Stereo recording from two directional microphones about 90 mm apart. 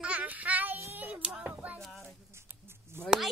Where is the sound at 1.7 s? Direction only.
5° left (ahead or behind).